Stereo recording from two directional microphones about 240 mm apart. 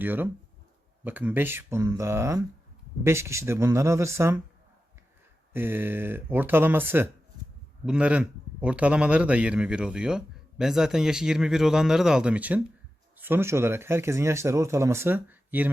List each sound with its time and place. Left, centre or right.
0.0 s speech: centre
5.5 s a man's voice: centre